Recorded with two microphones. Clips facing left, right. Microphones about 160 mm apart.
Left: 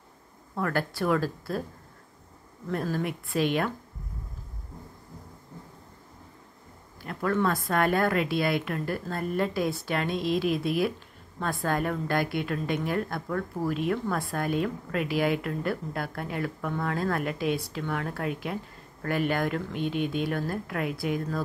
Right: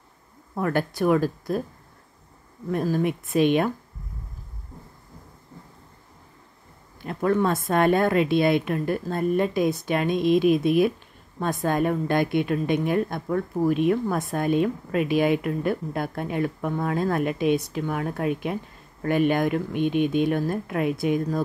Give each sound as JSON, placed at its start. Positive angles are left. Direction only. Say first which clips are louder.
{"t": 0.6, "sound": "speech", "louder": "right 4 dB", "side_deg": -20}
{"t": 2.7, "sound": "a woman's voice", "louder": "right 6 dB", "side_deg": -15}
{"t": 7.0, "sound": "a woman's voice", "louder": "right 5 dB", "side_deg": -20}